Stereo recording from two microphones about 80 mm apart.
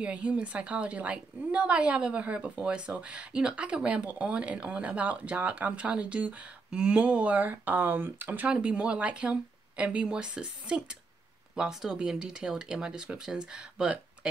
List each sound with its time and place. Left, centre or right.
0.0 s a woman's voice: centre